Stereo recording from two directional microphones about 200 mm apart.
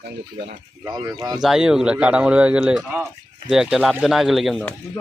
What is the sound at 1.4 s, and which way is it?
Speech, 5° right (ahead or behind).